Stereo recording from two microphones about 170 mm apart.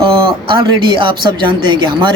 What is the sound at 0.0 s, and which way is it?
Speech, 30° right (ahead or behind).